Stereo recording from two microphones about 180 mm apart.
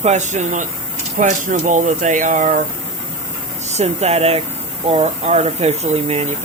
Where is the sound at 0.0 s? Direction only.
40° right (ahead or behind).